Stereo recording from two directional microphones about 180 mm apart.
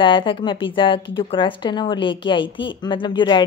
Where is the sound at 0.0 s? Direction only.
25° left (ahead or behind).